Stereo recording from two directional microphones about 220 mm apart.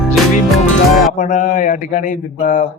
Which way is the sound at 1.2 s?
35° left (ahead or behind).